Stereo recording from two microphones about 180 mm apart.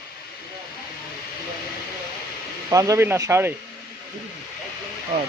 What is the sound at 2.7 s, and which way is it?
Speech, 20° right (ahead or behind).